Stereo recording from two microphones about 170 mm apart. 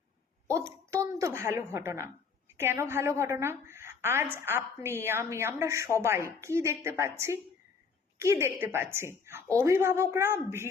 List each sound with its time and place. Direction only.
0.9 s a woman's voice: 15° right (ahead or behind)
8.2 s a woman's voice: 15° right (ahead or behind)